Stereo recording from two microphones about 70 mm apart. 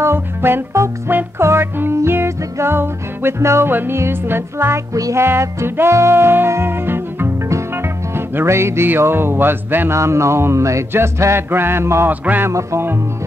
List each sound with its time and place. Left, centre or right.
0.0 s music: right
7.4 s music: right
9.9 s a sound: right
10.9 s music: right
12.1 s music: right
12.4 s music: right